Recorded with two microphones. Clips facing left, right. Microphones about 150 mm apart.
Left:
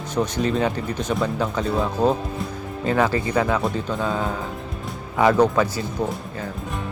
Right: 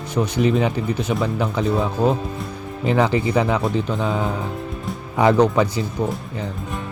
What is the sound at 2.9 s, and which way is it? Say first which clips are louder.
Speech: right 2 dB; 15° right (ahead or behind).